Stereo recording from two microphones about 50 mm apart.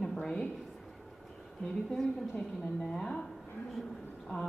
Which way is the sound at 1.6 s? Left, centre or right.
Centre.